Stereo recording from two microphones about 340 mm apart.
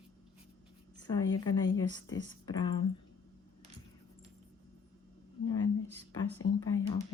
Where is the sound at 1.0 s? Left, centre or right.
Centre.